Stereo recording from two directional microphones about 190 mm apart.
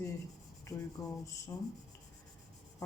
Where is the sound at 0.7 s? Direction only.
15° left (ahead or behind).